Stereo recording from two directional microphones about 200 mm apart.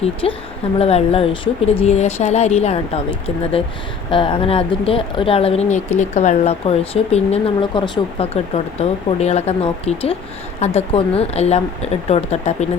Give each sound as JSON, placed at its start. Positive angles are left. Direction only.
{"t": 0.0, "sound": "speech", "side_deg": 30}